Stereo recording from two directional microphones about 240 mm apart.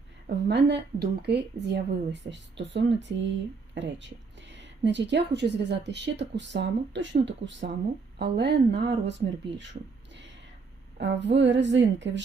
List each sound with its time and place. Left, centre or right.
0.3 s a woman's voice: right
10.9 s a woman's voice: right